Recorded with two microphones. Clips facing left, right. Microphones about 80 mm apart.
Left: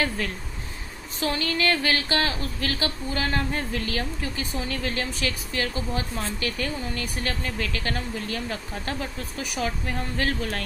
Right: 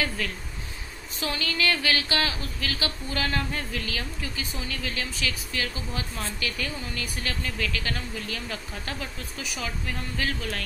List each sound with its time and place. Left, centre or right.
1.2 s a woman's voice: left